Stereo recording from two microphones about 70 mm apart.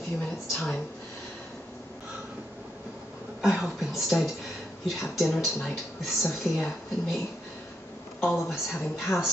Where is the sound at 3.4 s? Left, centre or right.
Centre.